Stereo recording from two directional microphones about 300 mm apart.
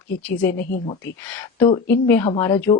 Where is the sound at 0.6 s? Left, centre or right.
Left.